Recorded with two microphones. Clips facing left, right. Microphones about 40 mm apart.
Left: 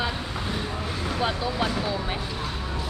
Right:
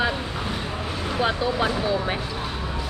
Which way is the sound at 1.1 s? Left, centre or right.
Centre.